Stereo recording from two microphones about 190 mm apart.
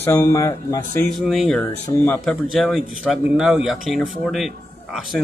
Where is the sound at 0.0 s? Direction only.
15° left (ahead or behind).